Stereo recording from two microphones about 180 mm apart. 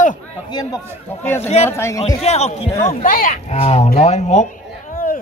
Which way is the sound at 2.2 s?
35° left (ahead or behind).